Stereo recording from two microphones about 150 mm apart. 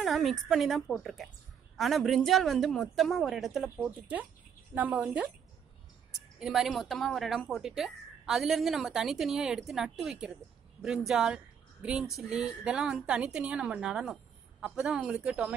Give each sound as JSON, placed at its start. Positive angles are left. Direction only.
{"t": 0.0, "sound": "a woman's voice", "side_deg": 0}
{"t": 6.4, "sound": "speech", "side_deg": 0}